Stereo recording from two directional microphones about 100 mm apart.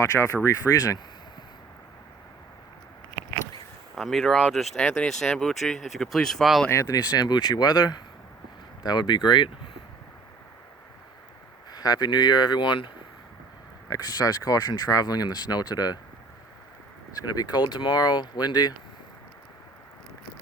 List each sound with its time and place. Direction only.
0.0 s speech: 30° left (ahead or behind)
3.9 s speech: centre (ahead or behind)
6.7 s speech: 35° left (ahead or behind); by 9.5 s 50° left (ahead or behind)
11.7 s speech: 40° left (ahead or behind)
13.9 s speech: 40° left (ahead or behind)
17.2 s speech: 40° left (ahead or behind)